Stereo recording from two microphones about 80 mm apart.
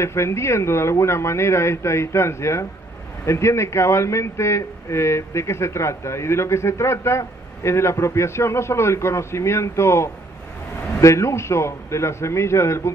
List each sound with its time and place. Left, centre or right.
0.0 s speech: left